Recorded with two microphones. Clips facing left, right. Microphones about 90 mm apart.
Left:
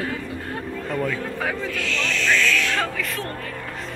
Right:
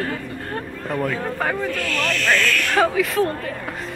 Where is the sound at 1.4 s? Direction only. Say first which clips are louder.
Right 5 dB; 5° right (ahead or behind).